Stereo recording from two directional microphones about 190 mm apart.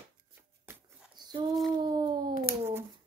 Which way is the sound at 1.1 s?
25° right (ahead or behind).